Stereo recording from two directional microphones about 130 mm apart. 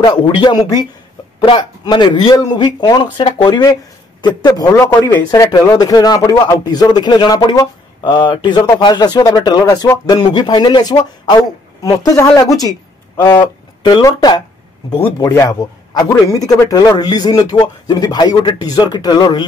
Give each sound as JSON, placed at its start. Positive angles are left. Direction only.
{"t": 0.0, "sound": "a woman's voice", "side_deg": 35}
{"t": 15.1, "sound": "speech", "side_deg": 25}